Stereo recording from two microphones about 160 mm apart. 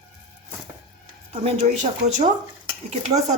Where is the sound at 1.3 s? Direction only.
45° right (ahead or behind).